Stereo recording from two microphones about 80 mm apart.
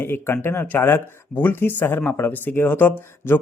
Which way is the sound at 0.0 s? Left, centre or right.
Left.